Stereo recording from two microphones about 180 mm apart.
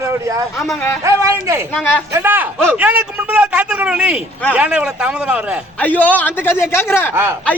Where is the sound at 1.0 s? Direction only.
15° right (ahead or behind).